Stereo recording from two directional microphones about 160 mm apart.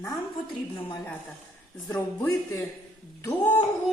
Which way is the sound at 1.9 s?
15° left (ahead or behind).